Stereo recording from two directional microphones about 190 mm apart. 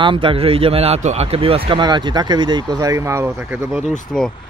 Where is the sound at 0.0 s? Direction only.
25° right (ahead or behind); by 3.8 s 10° right (ahead or behind).